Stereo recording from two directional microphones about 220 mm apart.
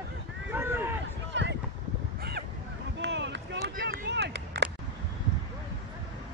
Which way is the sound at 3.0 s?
55° right (ahead or behind).